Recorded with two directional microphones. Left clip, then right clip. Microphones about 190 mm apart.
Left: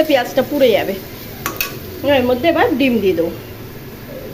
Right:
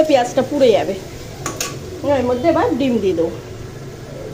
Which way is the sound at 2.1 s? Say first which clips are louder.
Left 2 dB; 20° left (ahead or behind).